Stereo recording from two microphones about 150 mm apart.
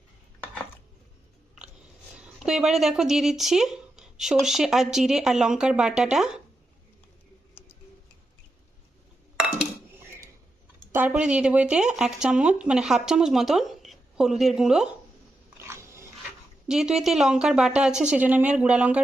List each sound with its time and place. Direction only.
2.1 s speech: 5° right (ahead or behind)
10.9 s speech: 10° right (ahead or behind)
15.5 s a sound: 15° right (ahead or behind)
16.6 s speech: 5° right (ahead or behind)